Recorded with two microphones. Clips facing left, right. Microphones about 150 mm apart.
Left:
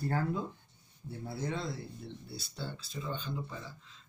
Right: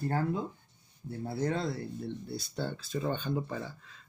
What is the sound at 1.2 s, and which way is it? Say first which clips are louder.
Speech: right 5 dB; 55° right (ahead or behind).